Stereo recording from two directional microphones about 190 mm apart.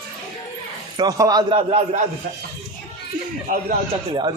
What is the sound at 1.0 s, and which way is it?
A man's voice, 20° right (ahead or behind).